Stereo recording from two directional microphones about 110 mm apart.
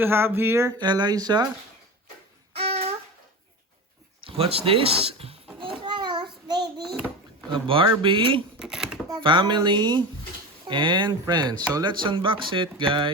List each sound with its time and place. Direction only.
0.0 s a sound: 20° right (ahead or behind)
0.7 s speech: 40° right (ahead or behind)
2.5 s a sound: 60° right (ahead or behind)
4.3 s speech: 60° right (ahead or behind)
5.8 s child singing: 45° right (ahead or behind)
6.8 s a sound: centre (ahead or behind)
7.5 s speech: 50° right (ahead or behind)
8.5 s speech: 5° right (ahead or behind)
9.0 s speech: 45° right (ahead or behind)